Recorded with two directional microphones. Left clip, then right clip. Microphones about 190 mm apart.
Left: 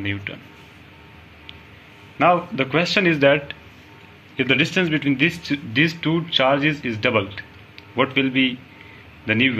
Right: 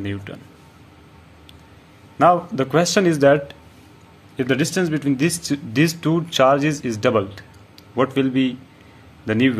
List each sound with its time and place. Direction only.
0.0 s speech: 45° right (ahead or behind)
2.1 s a man's voice: 45° right (ahead or behind)